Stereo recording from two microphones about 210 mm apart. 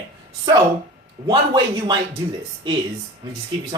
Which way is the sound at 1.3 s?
25° right (ahead or behind).